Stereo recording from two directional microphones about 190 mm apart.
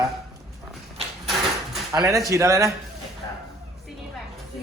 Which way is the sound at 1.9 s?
20° right (ahead or behind).